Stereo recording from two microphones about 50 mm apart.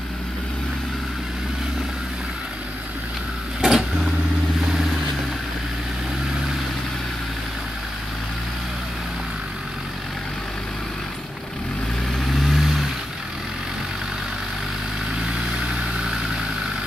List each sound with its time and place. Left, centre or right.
3.6 s vehicle: centre
12.2 s vehicle: centre